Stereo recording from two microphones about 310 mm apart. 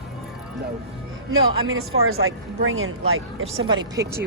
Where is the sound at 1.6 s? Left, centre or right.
Right.